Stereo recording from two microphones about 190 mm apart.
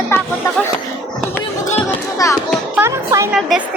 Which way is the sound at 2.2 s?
15° left (ahead or behind).